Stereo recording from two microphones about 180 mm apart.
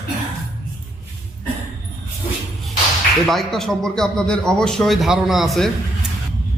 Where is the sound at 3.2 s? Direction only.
Centre (ahead or behind).